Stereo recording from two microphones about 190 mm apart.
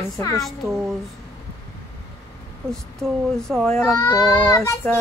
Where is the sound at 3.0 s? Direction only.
Centre (ahead or behind).